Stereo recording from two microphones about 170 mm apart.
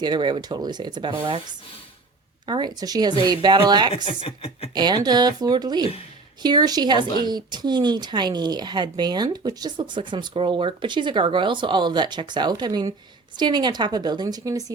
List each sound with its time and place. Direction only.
0.0 s speech: 25° right (ahead or behind)
3.9 s speech: 35° left (ahead or behind)
4.7 s speech: 25° right (ahead or behind)